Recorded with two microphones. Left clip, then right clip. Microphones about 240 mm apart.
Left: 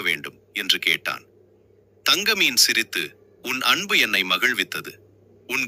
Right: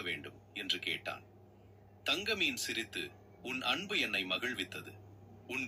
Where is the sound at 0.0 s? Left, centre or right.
Left.